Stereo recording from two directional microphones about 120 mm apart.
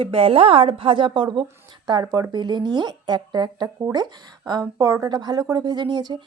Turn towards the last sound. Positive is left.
turn(degrees=-35)  # may be behind; listen again after turning